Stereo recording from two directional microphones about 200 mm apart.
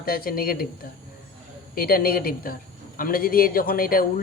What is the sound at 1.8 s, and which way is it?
Speech, 45° left (ahead or behind).